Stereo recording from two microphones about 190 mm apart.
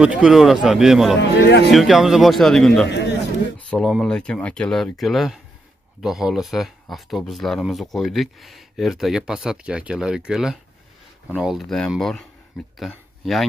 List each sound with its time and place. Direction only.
0.0 s speech: 5° right (ahead or behind)
1.3 s speech: 60° left (ahead or behind)
1.7 s speech: centre (ahead or behind)
2.9 s a man's voice: 65° left (ahead or behind)
3.5 s speech: 5° left (ahead or behind)